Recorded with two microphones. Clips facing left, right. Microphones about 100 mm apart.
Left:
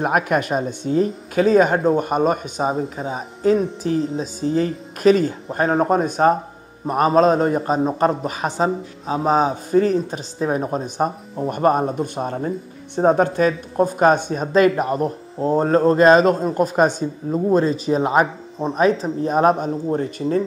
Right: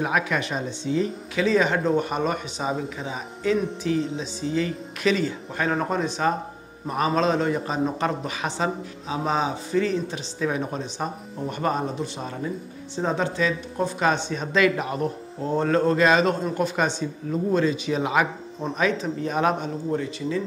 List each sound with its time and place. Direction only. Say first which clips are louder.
0.0 s a man's voice: left 5 dB; 50° left (ahead or behind)